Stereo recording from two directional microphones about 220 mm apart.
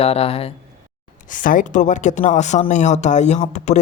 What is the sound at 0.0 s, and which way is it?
Speech, 25° left (ahead or behind).